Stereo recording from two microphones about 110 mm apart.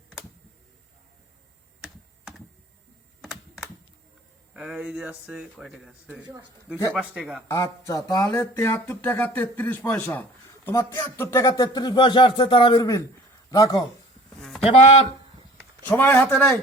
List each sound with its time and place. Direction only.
3.2 s computer keyboard: 5° right (ahead or behind)
4.5 s speech: 10° right (ahead or behind)
6.9 s speech: 10° right (ahead or behind)
7.5 s speech: 30° left (ahead or behind); by 12.9 s 45° left (ahead or behind)
13.5 s speech: 30° left (ahead or behind)
14.3 s a sound: centre (ahead or behind)
14.6 s speech: 60° left (ahead or behind)
15.9 s speech: 20° left (ahead or behind)